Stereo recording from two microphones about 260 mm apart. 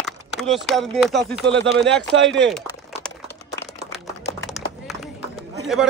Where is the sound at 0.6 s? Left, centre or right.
Centre.